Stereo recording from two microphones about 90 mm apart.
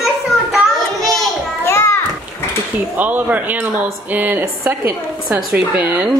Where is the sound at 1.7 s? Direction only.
30° left (ahead or behind).